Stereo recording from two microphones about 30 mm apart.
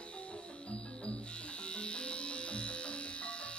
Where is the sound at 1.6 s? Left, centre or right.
Left.